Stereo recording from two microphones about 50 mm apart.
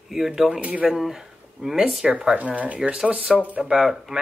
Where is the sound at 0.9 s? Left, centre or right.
Centre.